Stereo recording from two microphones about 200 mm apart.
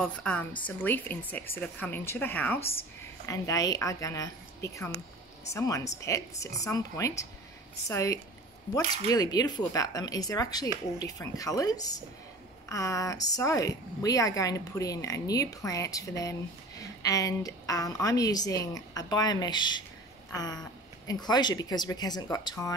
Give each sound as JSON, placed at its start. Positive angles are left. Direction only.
{"t": 0.0, "sound": "a woman's voice", "side_deg": 5}